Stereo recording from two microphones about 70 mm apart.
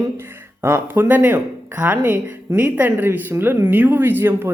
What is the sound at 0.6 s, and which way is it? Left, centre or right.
Speech, right.